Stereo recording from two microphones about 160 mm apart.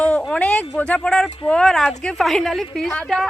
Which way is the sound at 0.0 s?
5° left (ahead or behind).